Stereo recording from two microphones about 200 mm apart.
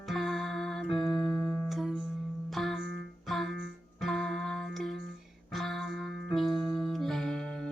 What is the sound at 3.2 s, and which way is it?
Music, centre (ahead or behind).